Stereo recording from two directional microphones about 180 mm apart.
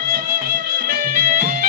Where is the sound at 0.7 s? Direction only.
55° right (ahead or behind).